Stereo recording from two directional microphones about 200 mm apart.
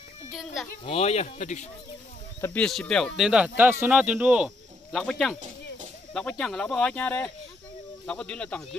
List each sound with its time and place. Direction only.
0.8 s speech: 30° left (ahead or behind)
2.4 s speech: 5° left (ahead or behind)